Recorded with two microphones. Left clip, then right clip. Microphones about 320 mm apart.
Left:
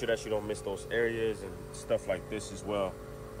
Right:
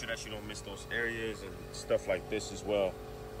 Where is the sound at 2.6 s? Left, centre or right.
Left.